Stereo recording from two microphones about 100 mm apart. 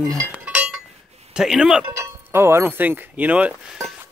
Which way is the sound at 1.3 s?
5° right (ahead or behind).